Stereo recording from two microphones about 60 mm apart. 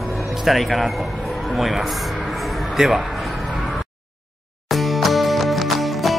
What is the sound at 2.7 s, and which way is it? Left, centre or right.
Speech, centre.